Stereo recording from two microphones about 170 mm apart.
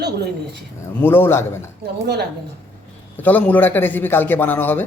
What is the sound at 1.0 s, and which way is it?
Speech, 15° left (ahead or behind).